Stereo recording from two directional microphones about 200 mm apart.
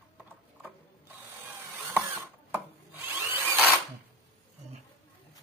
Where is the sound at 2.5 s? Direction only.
10° right (ahead or behind).